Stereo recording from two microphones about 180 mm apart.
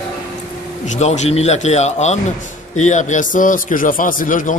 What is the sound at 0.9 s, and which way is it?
A man's voice, 40° left (ahead or behind).